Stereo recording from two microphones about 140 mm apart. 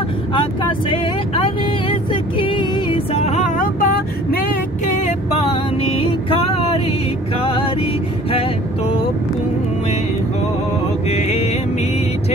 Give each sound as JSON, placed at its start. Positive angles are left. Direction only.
{"t": 0.3, "sound": "vehicle", "side_deg": 40}
{"t": 5.0, "sound": "music", "side_deg": 45}
{"t": 7.3, "sound": "vehicle", "side_deg": 40}
{"t": 11.1, "sound": "music", "side_deg": 50}